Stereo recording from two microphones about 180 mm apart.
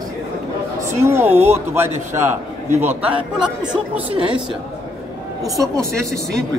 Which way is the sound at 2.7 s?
40° right (ahead or behind).